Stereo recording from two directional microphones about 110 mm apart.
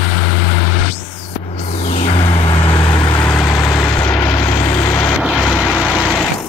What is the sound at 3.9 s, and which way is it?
Vehicle, 25° left (ahead or behind).